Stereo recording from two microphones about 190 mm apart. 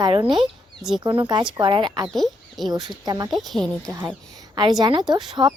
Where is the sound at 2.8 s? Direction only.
20° right (ahead or behind).